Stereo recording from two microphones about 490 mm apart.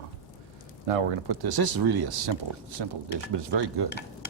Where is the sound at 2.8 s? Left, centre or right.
Right.